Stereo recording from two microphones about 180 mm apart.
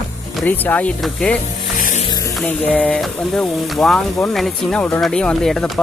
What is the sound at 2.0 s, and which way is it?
Music, 20° left (ahead or behind).